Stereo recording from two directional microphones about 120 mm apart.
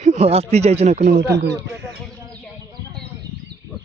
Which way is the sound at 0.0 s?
60° right (ahead or behind).